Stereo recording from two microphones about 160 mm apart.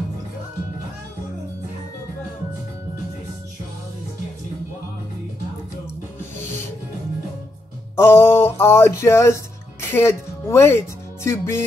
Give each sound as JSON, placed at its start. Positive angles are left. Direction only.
{"t": 7.9, "sound": "speech", "side_deg": 15}